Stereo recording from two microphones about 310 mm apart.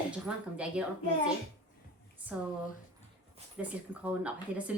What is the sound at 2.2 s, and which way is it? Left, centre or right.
Speech, centre.